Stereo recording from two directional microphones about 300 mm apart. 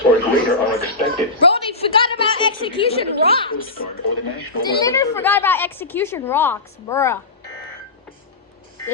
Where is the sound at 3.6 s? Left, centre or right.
Left.